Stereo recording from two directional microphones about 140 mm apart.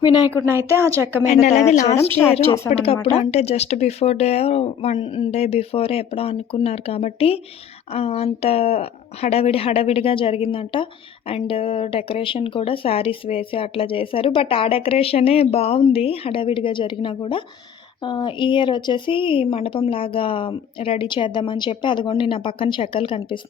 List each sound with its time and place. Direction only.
0.0 s speech: 30° left (ahead or behind)
0.3 s speech: 15° right (ahead or behind)
1.3 s speech: 55° left (ahead or behind)
2.0 s speech: 15° left (ahead or behind)
2.3 s a woman's voice: 45° left (ahead or behind)
4.9 s speech: 35° left (ahead or behind)
5.3 s a woman's voice: 50° left (ahead or behind)